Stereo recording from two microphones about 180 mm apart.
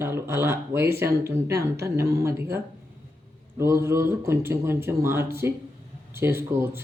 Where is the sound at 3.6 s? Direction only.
15° right (ahead or behind).